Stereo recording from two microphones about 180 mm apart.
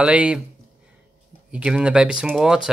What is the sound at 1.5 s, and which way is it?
Speech, 5° right (ahead or behind).